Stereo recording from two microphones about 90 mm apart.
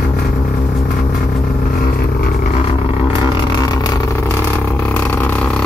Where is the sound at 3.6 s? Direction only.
40° left (ahead or behind).